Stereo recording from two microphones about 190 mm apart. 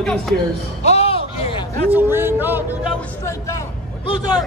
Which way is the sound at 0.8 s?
35° left (ahead or behind).